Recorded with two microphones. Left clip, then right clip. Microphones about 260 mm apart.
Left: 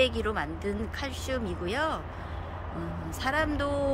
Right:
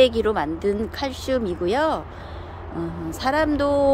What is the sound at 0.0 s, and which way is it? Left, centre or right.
Speech, right.